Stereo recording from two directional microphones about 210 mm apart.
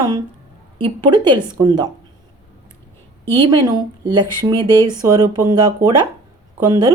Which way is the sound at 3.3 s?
25° right (ahead or behind).